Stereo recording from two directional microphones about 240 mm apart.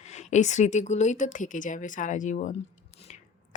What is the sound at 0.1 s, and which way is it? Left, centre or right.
Speech, left.